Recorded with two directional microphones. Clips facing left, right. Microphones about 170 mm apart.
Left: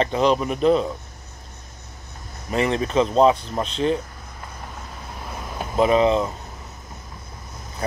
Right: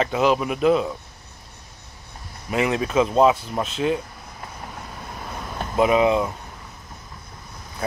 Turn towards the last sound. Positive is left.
turn(degrees=-10)  # may be behind; listen again after turning